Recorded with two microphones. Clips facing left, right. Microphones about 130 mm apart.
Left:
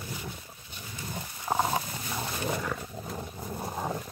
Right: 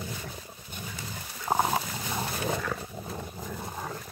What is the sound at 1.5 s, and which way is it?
Dog, 10° right (ahead or behind).